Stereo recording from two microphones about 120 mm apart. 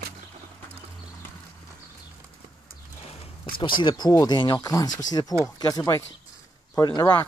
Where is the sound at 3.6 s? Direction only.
40° left (ahead or behind).